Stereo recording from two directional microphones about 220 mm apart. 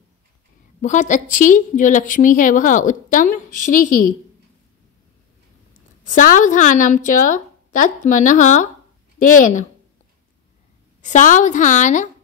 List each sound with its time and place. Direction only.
0.7 s a woman's voice: 35° left (ahead or behind)
6.0 s a woman's voice: 35° left (ahead or behind)
11.0 s a woman's voice: 35° left (ahead or behind)